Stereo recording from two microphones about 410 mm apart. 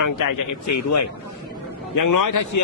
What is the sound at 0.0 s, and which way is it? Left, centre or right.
Speech, left.